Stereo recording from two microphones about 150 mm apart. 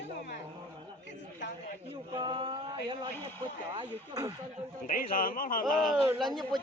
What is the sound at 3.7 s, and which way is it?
Speech, 25° right (ahead or behind).